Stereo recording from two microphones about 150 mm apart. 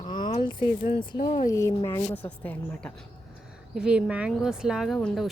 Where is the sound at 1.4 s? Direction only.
20° left (ahead or behind).